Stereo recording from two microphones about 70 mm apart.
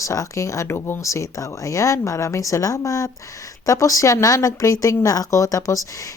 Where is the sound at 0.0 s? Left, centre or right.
Left.